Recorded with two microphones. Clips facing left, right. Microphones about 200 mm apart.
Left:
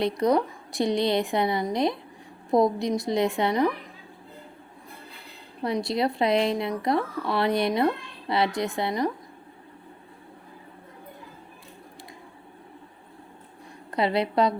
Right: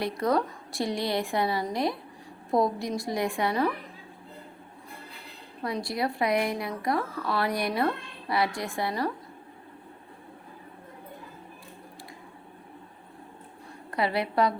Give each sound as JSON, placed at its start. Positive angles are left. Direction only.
{"t": 0.0, "sound": "speech", "side_deg": 20}
{"t": 5.6, "sound": "speech", "side_deg": 25}
{"t": 13.9, "sound": "speech", "side_deg": 20}